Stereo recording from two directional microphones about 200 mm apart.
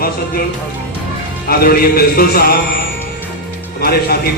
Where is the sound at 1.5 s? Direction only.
50° left (ahead or behind).